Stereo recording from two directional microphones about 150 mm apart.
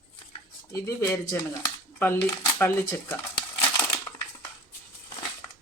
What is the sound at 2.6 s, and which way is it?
Speech, 15° left (ahead or behind).